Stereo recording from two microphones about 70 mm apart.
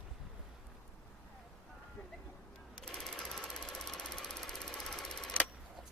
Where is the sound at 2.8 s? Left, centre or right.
Centre.